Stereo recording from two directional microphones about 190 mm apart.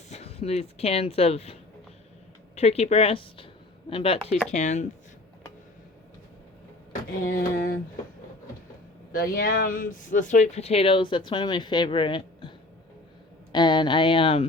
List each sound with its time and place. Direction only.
0.1 s speech: 35° left (ahead or behind)
2.6 s speech: 35° left (ahead or behind)
7.3 s a sound: 50° left (ahead or behind)
9.1 s speech: 50° left (ahead or behind); by 14.4 s 30° left (ahead or behind)